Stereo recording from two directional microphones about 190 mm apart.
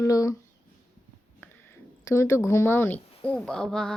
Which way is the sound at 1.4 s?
15° left (ahead or behind).